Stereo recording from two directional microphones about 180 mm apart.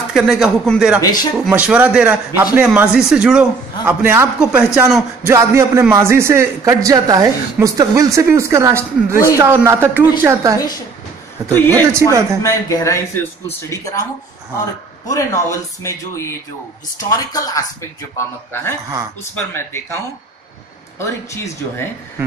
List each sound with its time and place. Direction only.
0.1 s a man's voice: centre (ahead or behind); by 10.6 s 15° right (ahead or behind)
11.4 s speech: 10° left (ahead or behind)
12.1 s a man's voice: 15° right (ahead or behind)
12.4 s speech: 20° left (ahead or behind)
15.0 s speech: 15° left (ahead or behind)
21.0 s speech: 15° left (ahead or behind)